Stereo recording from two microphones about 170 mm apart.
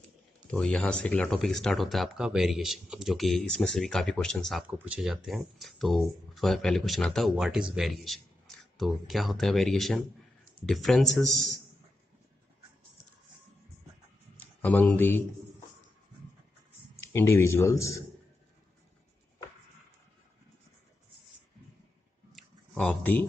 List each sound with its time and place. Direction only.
0.5 s speech: 5° left (ahead or behind)
4.6 s speech: 10° right (ahead or behind)
14.3 s speech: 10° left (ahead or behind)
17.0 s a man's voice: 15° left (ahead or behind)
22.3 s a sound: 10° left (ahead or behind)